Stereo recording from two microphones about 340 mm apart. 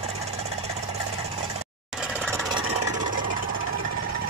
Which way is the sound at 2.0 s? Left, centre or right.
Centre.